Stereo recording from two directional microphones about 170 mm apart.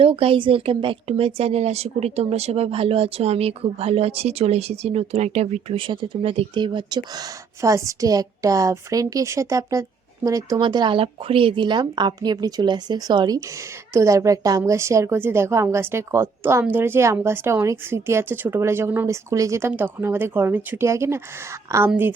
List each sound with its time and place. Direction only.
0.0 s a woman's voice: 30° right (ahead or behind); by 22.1 s 10° right (ahead or behind)